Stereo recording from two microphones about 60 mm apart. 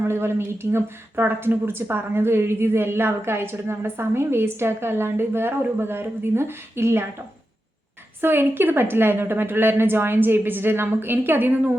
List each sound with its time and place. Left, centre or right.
0.0 s speech: right
8.2 s a woman's voice: right